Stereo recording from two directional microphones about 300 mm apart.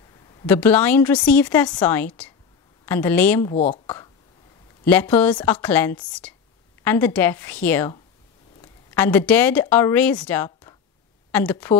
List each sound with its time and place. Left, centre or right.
0.5 s a woman's voice: centre
3.5 s speech: left
3.8 s a sound: centre
4.8 s a woman's voice: centre
8.9 s speech: centre